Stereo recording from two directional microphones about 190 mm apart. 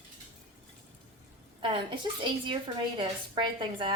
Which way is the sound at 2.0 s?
20° right (ahead or behind).